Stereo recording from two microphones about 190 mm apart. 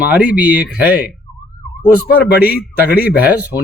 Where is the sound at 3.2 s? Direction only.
10° right (ahead or behind).